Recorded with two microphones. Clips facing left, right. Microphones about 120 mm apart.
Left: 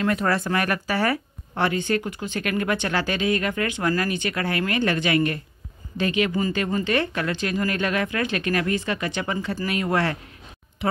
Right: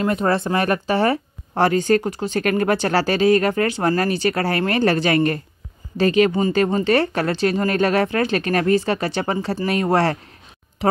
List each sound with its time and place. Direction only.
0.0 s speech: 25° right (ahead or behind)